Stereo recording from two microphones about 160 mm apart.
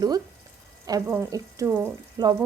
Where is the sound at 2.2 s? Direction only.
25° right (ahead or behind).